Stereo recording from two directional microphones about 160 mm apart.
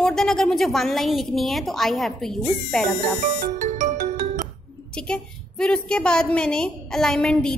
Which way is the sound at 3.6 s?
50° right (ahead or behind).